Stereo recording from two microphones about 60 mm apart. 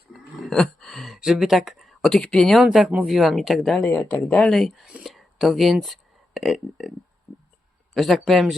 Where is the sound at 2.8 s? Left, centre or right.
Centre.